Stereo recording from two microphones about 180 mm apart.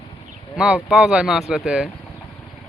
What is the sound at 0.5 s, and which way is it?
Speech, 5° right (ahead or behind).